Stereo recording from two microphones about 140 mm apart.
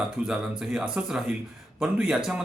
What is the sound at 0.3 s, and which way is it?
Speech, 5° right (ahead or behind).